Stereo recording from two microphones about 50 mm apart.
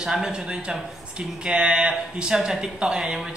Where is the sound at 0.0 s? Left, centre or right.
Centre.